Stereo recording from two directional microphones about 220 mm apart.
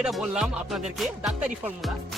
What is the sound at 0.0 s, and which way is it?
Music, centre (ahead or behind).